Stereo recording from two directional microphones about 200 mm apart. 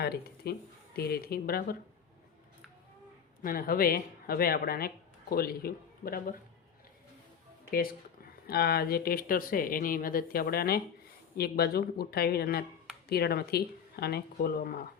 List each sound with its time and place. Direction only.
0.0 s speech: 50° left (ahead or behind)
3.4 s speech: 45° left (ahead or behind)
8.4 s speech: 50° left (ahead or behind)